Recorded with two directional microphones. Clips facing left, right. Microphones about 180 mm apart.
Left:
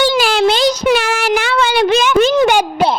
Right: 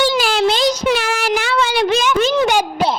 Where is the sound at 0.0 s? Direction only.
70° left (ahead or behind); by 2.6 s 50° left (ahead or behind).